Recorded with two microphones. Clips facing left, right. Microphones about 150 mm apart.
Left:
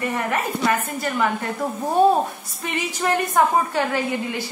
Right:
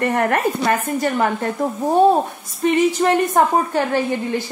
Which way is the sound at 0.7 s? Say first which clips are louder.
Right 4 dB; 40° right (ahead or behind).